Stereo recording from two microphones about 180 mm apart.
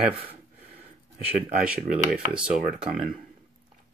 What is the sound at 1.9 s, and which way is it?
Speech, 5° right (ahead or behind).